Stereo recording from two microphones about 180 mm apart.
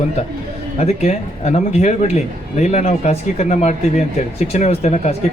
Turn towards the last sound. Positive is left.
turn(degrees=35)  # may be behind; listen again after turning